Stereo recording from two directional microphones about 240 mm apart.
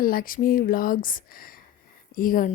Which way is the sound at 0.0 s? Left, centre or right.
Left.